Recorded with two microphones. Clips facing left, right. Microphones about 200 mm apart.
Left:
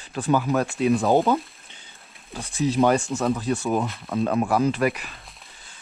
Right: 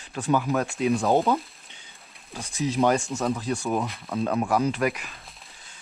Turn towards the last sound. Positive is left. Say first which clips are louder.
# left 3 dB
turn(degrees=0)  # may be behind; listen again after turning